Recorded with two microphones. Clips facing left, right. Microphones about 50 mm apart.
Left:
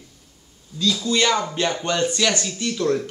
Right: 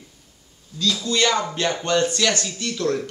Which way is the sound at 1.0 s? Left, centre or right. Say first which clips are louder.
Even; centre.